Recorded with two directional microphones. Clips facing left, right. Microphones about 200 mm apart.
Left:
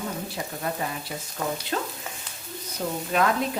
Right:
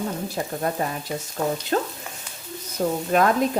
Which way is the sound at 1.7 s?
40° right (ahead or behind).